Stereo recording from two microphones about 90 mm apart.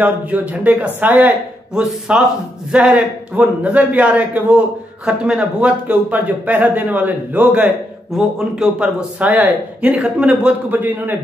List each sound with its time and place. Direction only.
0.0 s speech: 15° right (ahead or behind)
1.8 s a man's voice: 5° right (ahead or behind)